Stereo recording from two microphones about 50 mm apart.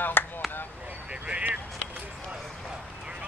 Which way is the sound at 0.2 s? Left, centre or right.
Left.